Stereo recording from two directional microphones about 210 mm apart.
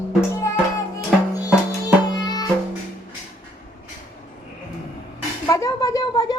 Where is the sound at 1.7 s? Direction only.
20° left (ahead or behind).